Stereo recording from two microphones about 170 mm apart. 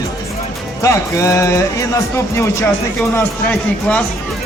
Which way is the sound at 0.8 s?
15° left (ahead or behind).